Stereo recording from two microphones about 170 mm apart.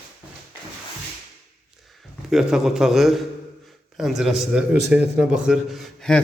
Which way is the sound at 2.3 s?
5° right (ahead or behind).